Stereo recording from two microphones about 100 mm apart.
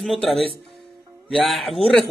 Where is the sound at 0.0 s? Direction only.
Centre (ahead or behind).